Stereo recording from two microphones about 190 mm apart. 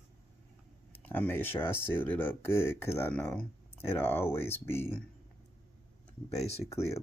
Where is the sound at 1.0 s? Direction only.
10° left (ahead or behind).